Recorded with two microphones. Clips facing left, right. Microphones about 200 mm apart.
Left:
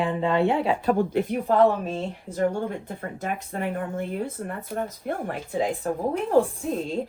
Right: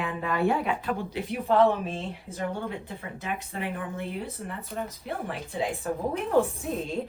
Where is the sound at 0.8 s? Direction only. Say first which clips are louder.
Left 8 dB; 50° left (ahead or behind).